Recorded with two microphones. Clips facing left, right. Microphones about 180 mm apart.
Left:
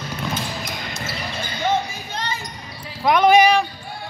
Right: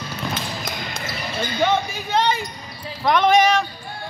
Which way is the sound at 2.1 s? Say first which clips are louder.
Right 10 dB; 65° right (ahead or behind).